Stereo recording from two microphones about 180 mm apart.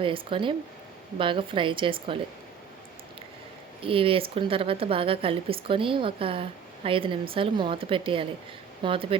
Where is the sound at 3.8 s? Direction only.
30° right (ahead or behind).